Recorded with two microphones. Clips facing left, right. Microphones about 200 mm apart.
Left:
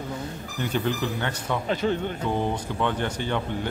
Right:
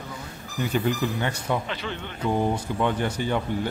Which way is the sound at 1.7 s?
45° left (ahead or behind).